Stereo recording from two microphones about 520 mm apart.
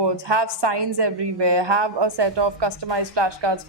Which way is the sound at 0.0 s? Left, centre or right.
Right.